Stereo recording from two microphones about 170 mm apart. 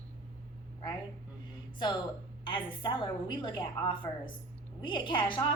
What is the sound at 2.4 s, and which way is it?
A woman's voice, 30° left (ahead or behind).